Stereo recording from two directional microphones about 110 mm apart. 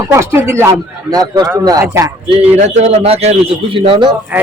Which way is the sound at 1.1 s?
35° right (ahead or behind).